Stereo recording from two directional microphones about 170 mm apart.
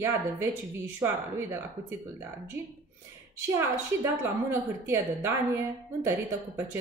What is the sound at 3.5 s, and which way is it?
A woman's voice, 15° right (ahead or behind).